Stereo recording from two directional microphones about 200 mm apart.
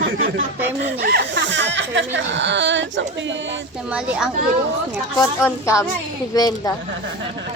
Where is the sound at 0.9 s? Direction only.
50° right (ahead or behind).